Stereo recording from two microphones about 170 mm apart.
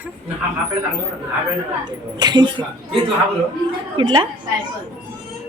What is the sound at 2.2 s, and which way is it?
Speech, 25° right (ahead or behind).